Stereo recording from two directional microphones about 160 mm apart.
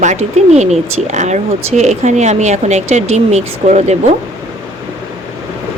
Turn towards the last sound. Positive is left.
turn(degrees=-45)  # may be behind; listen again after turning